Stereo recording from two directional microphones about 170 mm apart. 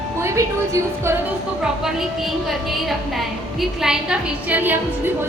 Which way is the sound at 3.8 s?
5° right (ahead or behind).